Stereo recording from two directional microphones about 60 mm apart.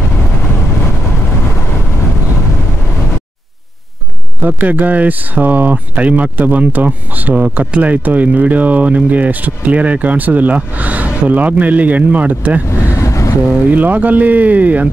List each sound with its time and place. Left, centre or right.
4.5 s speech: right
12.9 s vehicle: left
13.7 s speech: right